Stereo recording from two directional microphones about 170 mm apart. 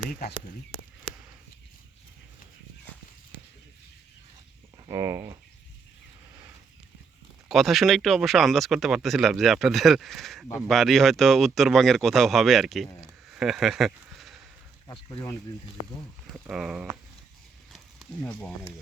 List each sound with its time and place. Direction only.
4.9 s speech: 20° right (ahead or behind)
7.4 s speech: centre (ahead or behind)
13.3 s a sound: centre (ahead or behind)
14.8 s speech: 20° left (ahead or behind)
16.3 s speech: 5° right (ahead or behind)
17.7 s a sound: 5° left (ahead or behind)